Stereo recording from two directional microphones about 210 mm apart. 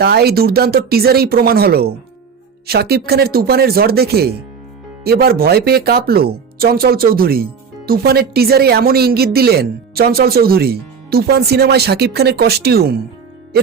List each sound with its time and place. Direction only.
0.0 s speech: 50° right (ahead or behind)